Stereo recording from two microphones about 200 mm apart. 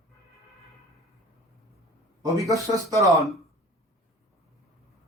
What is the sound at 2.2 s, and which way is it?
Speech, 15° right (ahead or behind).